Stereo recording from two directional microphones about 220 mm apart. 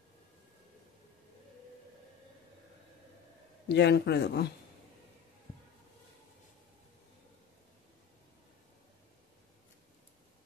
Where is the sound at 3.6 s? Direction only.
50° left (ahead or behind).